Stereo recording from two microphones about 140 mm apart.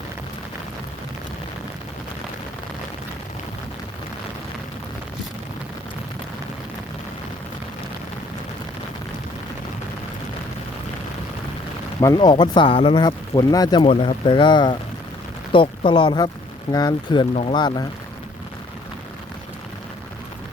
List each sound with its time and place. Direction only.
11.9 s speech: 30° left (ahead or behind)
13.8 s speech: 40° left (ahead or behind)